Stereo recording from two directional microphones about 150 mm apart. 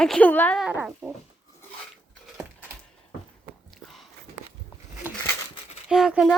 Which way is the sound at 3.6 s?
Centre (ahead or behind).